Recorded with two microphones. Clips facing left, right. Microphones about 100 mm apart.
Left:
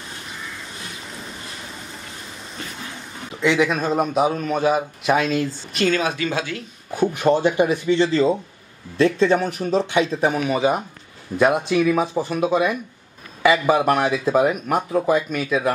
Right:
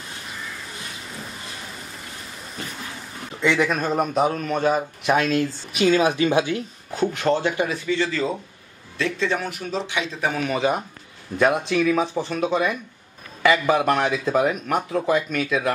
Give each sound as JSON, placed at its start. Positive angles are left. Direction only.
{"t": 3.3, "sound": "speech", "side_deg": 0}
{"t": 7.0, "sound": "speech", "side_deg": 15}
{"t": 8.9, "sound": "a man's voice", "side_deg": 40}
{"t": 10.4, "sound": "speech", "side_deg": 5}